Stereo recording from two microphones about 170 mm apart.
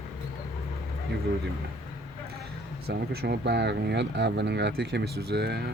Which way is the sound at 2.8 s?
70° right (ahead or behind).